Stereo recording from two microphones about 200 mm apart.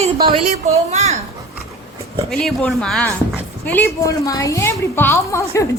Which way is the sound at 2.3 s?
Centre (ahead or behind).